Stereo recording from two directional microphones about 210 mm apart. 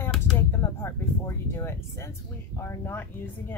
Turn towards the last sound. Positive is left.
turn(degrees=10)  # may be behind; listen again after turning